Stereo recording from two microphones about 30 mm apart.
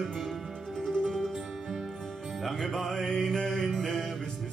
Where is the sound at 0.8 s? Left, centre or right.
Centre.